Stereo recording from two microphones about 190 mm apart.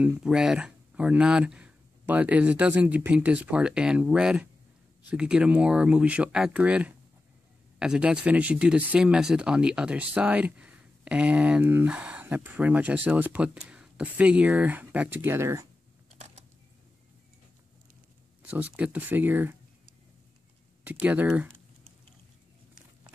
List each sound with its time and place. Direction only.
0.0 s speech: 5° right (ahead or behind)
16.1 s a sound: 35° right (ahead or behind)
18.5 s speech: 10° right (ahead or behind)
20.8 s speech: 10° right (ahead or behind)